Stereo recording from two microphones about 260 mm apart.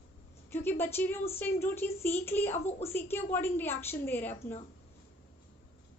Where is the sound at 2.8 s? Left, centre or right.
Centre.